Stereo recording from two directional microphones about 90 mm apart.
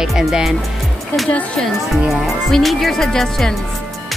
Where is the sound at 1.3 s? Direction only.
10° left (ahead or behind).